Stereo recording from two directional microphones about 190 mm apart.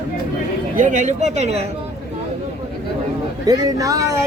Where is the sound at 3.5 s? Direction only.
20° right (ahead or behind).